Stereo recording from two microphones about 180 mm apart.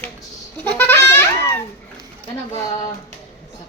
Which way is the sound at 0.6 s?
10° left (ahead or behind).